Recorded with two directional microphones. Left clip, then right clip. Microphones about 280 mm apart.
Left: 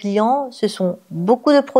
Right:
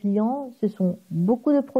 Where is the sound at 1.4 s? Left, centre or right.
Centre.